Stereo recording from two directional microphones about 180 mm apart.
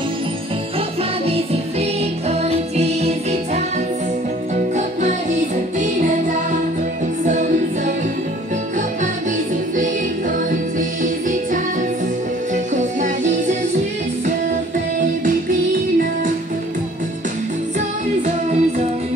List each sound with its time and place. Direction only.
1.2 s music: 35° right (ahead or behind)
7.2 s music: 45° right (ahead or behind)
10.8 s music: 45° right (ahead or behind)
12.7 s music: 40° right (ahead or behind)
17.7 s music: 40° right (ahead or behind)